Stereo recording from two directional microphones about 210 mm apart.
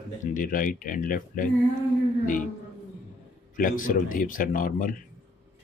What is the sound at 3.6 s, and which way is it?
Speech, 40° left (ahead or behind).